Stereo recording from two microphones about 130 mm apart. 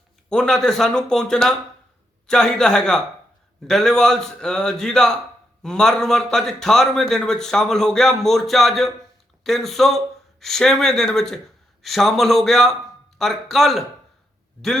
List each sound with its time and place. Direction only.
0.3 s a man's voice: 5° left (ahead or behind)